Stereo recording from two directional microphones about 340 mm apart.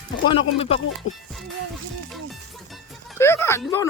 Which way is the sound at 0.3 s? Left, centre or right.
Centre.